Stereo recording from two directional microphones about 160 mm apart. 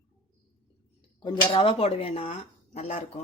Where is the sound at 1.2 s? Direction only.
30° left (ahead or behind).